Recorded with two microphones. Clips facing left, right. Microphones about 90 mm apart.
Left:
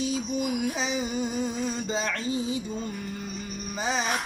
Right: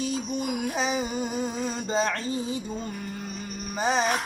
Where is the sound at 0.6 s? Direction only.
45° right (ahead or behind).